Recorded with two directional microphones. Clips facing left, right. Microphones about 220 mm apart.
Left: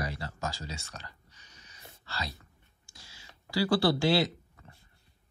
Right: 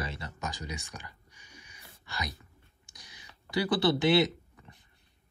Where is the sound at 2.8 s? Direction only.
20° right (ahead or behind).